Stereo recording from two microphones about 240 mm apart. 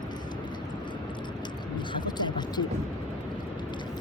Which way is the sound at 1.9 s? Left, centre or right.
Centre.